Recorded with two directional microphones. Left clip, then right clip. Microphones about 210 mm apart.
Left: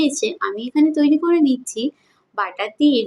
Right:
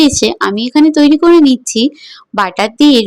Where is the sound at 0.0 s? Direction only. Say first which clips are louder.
Right 10 dB; 45° right (ahead or behind).